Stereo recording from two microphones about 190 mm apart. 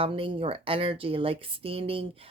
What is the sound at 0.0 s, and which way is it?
Speech, 30° right (ahead or behind).